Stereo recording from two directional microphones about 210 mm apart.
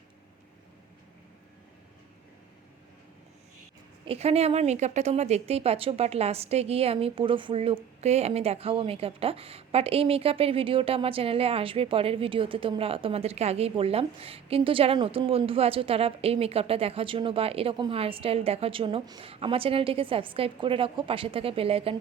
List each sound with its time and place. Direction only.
4.0 s a woman's voice: 30° right (ahead or behind)